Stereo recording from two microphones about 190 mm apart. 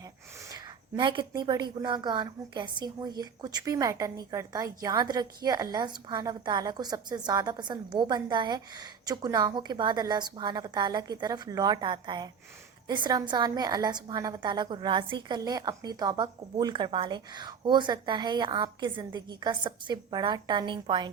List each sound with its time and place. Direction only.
0.5 s a woman's voice: 25° right (ahead or behind)